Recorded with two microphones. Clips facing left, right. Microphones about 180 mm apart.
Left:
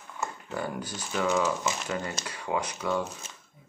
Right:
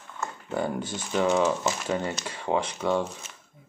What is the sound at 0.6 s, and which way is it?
Speech, 25° right (ahead or behind).